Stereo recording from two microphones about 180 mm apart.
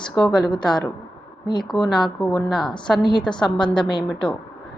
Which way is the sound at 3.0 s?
25° left (ahead or behind).